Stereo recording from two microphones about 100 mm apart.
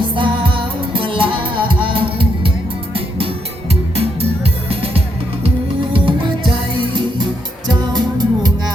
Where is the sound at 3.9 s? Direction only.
85° right.